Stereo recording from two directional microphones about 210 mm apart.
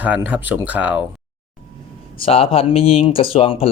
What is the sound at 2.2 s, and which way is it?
Speech, 25° left (ahead or behind).